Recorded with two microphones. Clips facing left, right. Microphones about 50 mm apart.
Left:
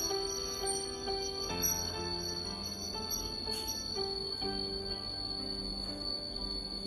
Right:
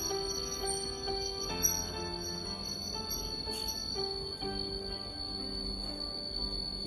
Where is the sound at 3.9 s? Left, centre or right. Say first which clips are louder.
Even; centre.